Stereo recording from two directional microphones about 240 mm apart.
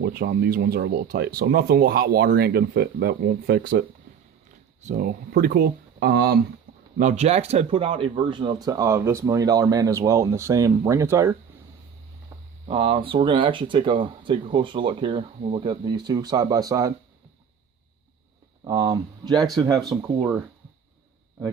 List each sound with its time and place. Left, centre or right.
0.0 s speech: right
6.7 s a sound: right
7.0 s speech: right; by 11.3 s centre
12.6 s speech: right
18.6 s speech: centre